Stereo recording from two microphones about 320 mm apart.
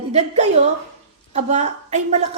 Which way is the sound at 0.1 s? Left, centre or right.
Right.